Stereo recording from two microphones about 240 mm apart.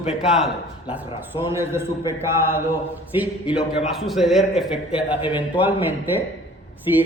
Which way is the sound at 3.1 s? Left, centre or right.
Centre.